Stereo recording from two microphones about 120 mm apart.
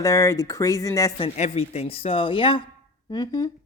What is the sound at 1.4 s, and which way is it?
Speech, 60° left (ahead or behind).